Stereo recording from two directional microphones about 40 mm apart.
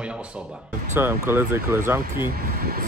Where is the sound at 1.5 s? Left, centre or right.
Right.